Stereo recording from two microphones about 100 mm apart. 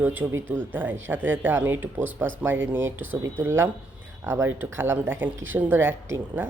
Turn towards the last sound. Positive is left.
turn(degrees=-25)  # may be behind; listen again after turning